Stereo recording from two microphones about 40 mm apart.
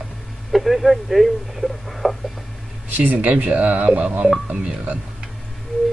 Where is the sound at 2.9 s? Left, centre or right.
Right.